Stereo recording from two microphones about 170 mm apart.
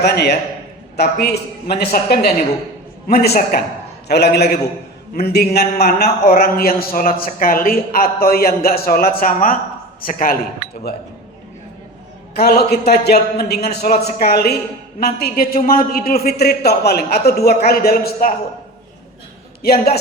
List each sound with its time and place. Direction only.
0.0 s a man's voice: 75° left (ahead or behind); by 10.4 s 55° left (ahead or behind)
12.4 s a man's voice: 65° left (ahead or behind)
19.6 s speech: 65° left (ahead or behind)